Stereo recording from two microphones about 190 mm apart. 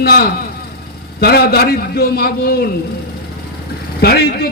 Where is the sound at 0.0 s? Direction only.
60° left (ahead or behind).